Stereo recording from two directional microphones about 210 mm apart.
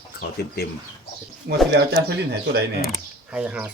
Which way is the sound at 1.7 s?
50° right (ahead or behind).